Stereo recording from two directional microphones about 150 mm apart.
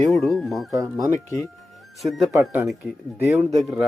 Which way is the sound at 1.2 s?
20° left (ahead or behind).